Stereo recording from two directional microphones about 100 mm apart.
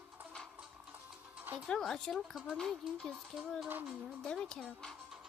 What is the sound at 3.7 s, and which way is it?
Speech, 20° right (ahead or behind).